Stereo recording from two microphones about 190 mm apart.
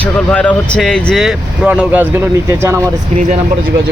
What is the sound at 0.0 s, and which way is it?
Vehicle, 5° left (ahead or behind).